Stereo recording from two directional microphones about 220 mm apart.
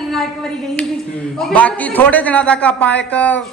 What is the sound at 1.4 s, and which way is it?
A man's voice, 5° left (ahead or behind).